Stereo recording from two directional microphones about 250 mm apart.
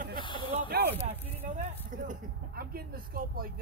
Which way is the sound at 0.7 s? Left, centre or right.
Right.